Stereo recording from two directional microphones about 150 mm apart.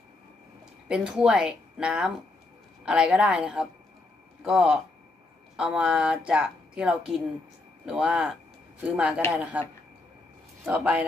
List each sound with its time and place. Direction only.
0.9 s speech: 5° right (ahead or behind)
10.7 s speech: 10° right (ahead or behind)